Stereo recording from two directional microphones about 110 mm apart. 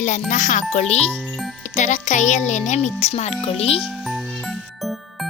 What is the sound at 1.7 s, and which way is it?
A child's voice, 90° left.